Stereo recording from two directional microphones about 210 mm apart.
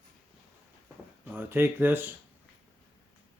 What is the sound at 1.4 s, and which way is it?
Speech, 10° right (ahead or behind).